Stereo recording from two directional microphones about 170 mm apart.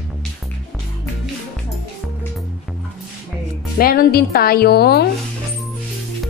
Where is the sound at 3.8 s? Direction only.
65° left (ahead or behind).